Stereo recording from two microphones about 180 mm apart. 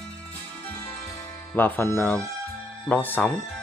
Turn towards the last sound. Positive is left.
turn(degrees=10)  # may be behind; listen again after turning